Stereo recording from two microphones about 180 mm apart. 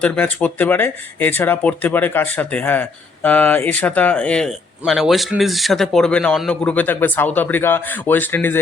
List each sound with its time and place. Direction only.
0.0 s speech: 5° left (ahead or behind)